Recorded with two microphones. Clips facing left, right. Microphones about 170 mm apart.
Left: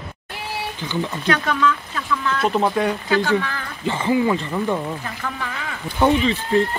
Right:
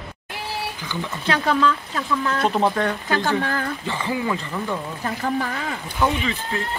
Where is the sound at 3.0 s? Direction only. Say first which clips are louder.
Left 2 dB; 45° right (ahead or behind).